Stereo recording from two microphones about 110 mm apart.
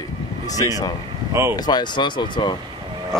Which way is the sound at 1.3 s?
25° right (ahead or behind).